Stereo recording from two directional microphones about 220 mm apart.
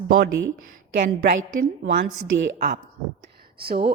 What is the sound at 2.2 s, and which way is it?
Speech, 55° right (ahead or behind).